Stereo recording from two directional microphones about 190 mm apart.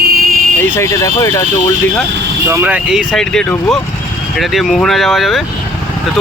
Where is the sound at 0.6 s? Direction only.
15° left (ahead or behind).